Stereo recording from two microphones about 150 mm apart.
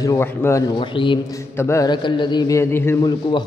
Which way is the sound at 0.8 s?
35° left (ahead or behind).